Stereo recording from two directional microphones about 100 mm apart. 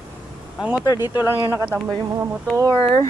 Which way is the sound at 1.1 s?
25° right (ahead or behind).